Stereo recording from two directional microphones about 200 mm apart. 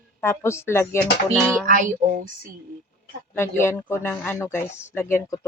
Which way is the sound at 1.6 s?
45° right (ahead or behind).